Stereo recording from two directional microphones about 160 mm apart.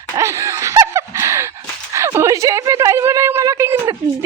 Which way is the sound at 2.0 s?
15° right (ahead or behind).